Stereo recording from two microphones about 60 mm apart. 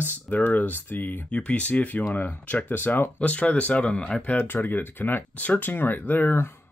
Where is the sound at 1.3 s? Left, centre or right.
Left.